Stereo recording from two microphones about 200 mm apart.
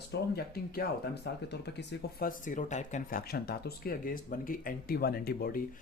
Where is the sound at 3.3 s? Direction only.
50° left (ahead or behind).